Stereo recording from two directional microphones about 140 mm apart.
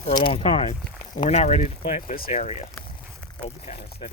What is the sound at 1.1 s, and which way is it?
Speech, 60° left (ahead or behind).